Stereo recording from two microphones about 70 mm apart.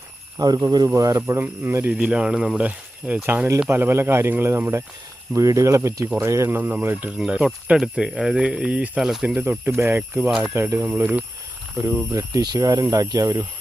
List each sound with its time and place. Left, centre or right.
0.3 s speech: right
0.9 s speech: right
1.4 s speech: right
1.9 s speech: centre
2.6 s speech: right
3.2 s speech: right
5.3 s speech: right
6.6 s speech: right
7.2 s speech: centre
8.4 s speech: centre
12.5 s speech: right